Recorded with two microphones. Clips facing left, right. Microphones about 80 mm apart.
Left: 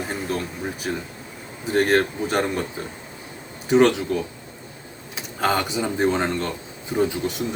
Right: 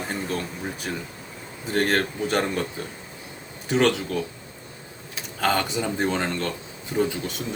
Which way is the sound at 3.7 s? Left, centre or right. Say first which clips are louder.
Left 5 dB; centre.